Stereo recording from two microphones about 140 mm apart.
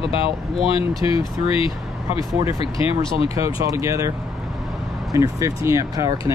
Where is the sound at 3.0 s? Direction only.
40° left (ahead or behind).